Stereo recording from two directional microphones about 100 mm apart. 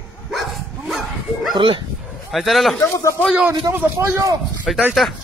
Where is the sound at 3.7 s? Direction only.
25° right (ahead or behind).